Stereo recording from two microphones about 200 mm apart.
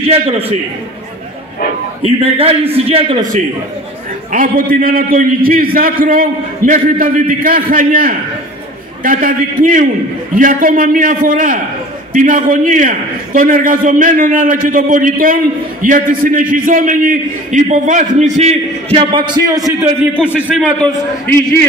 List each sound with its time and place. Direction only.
0.1 s a man's voice: 30° right (ahead or behind)
2.0 s a man's voice: 30° right (ahead or behind)
4.3 s a man's voice: 45° right (ahead or behind); by 19.9 s 15° right (ahead or behind)
20.3 s a man's voice: 5° right (ahead or behind)